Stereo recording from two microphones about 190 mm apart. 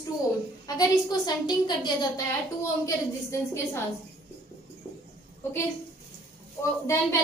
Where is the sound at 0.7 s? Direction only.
20° left (ahead or behind).